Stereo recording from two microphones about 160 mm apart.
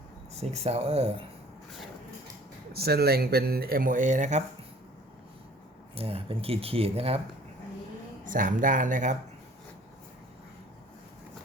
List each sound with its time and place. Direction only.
0.3 s speech: 40° right (ahead or behind)
2.7 s speech: 80° right; by 4.4 s 50° right (ahead or behind)
5.9 s speech: 35° right (ahead or behind)
8.2 s speech: 55° right (ahead or behind)